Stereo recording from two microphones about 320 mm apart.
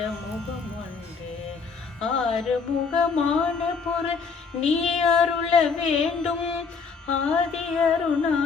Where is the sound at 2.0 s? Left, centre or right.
Centre.